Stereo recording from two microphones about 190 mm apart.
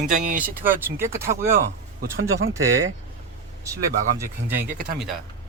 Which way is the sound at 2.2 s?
90° right.